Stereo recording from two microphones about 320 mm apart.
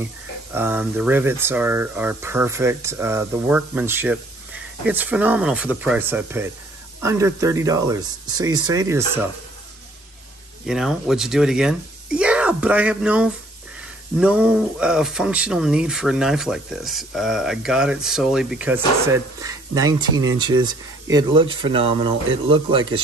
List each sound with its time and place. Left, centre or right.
0.0 s speech: centre
10.6 s speech: centre